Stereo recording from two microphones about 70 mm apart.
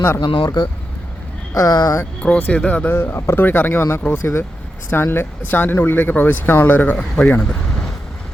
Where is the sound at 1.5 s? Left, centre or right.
Left.